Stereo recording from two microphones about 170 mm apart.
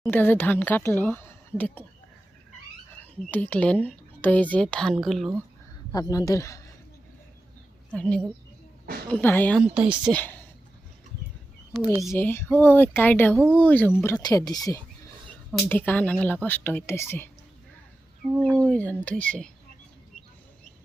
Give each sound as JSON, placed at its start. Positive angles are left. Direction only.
{"t": 0.0, "sound": "speech", "side_deg": 10}
{"t": 3.2, "sound": "speech", "side_deg": 10}
{"t": 5.9, "sound": "speech", "side_deg": 20}
{"t": 7.9, "sound": "a woman's voice", "side_deg": 5}
{"t": 9.6, "sound": "speech", "side_deg": -5}
{"t": 10.1, "sound": "speech", "side_deg": 10}
{"t": 12.1, "sound": "speech", "side_deg": 15}
{"t": 15.7, "sound": "speech", "side_deg": 10}
{"t": 18.6, "sound": "speech", "side_deg": 5}